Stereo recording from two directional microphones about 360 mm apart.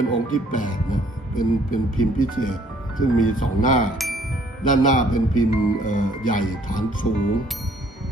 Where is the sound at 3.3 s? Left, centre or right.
Left.